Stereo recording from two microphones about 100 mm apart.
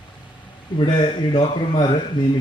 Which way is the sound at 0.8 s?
55° left (ahead or behind).